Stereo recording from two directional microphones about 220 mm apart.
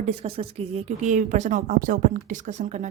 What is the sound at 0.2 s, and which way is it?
A woman's voice, 25° right (ahead or behind).